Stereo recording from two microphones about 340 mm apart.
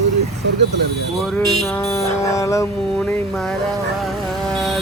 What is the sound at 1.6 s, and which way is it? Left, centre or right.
Music, centre.